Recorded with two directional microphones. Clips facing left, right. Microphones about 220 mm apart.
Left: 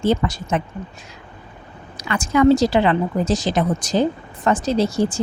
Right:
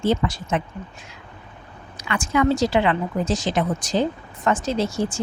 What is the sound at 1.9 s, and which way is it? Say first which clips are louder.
Speech: left 3 dB; 40° left (ahead or behind).